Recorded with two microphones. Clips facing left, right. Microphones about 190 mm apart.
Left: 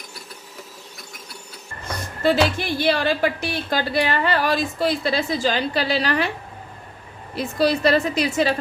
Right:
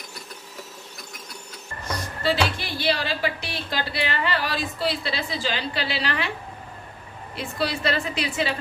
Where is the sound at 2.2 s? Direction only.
50° left (ahead or behind).